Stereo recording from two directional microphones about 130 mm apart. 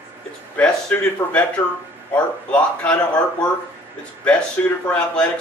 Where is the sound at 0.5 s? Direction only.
10° left (ahead or behind).